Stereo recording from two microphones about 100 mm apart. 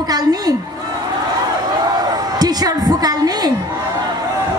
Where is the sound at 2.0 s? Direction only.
45° right (ahead or behind).